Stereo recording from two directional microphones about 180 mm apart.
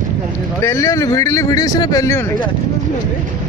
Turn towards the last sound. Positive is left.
turn(degrees=15)  # may be behind; listen again after turning